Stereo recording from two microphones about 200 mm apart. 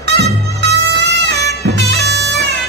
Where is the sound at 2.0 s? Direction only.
55° right (ahead or behind).